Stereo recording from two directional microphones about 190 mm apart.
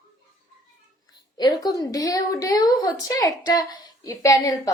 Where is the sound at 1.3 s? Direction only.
20° left (ahead or behind).